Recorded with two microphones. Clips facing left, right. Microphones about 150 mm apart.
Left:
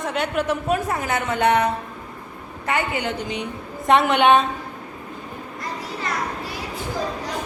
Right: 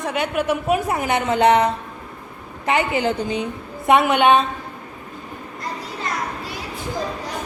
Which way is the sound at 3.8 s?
5° right (ahead or behind).